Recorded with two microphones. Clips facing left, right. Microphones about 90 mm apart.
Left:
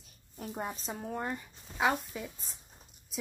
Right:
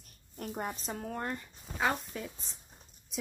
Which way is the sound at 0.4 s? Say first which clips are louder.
Right 1 dB; centre (ahead or behind).